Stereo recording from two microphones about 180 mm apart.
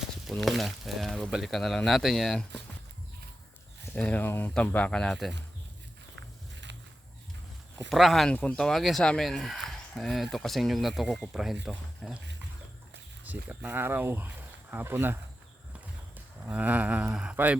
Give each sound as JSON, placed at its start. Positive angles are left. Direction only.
{"t": 0.3, "sound": "speech", "side_deg": 0}
{"t": 3.9, "sound": "speech", "side_deg": 10}
{"t": 6.1, "sound": "walk", "side_deg": -80}
{"t": 7.9, "sound": "speech", "side_deg": 0}
{"t": 13.2, "sound": "speech", "side_deg": -10}